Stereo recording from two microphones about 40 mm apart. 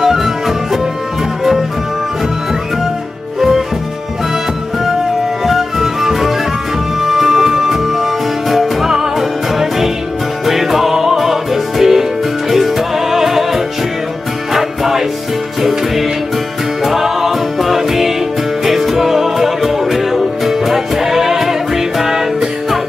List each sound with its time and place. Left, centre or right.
0.0 s music: centre
3.3 s music: centre
5.4 s music: centre